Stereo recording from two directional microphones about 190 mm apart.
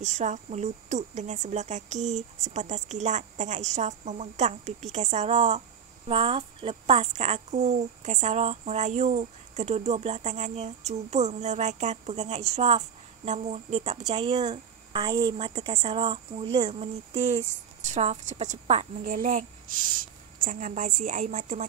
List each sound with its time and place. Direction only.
0.0 s a woman's voice: 40° right (ahead or behind)